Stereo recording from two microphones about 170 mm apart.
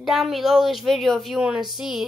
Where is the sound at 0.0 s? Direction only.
Centre (ahead or behind).